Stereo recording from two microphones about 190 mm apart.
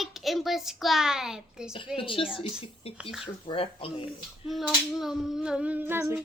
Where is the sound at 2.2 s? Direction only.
5° right (ahead or behind).